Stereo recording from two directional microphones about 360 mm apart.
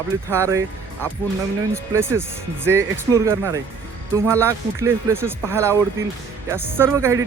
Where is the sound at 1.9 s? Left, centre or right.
Centre.